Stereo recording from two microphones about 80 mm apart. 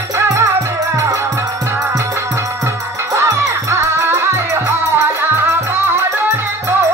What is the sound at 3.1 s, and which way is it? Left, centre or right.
Music, right.